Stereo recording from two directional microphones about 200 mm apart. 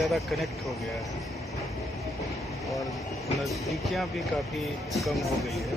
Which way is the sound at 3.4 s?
Centre (ahead or behind).